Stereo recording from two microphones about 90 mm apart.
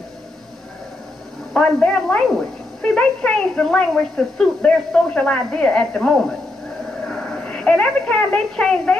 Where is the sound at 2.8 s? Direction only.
5° left (ahead or behind).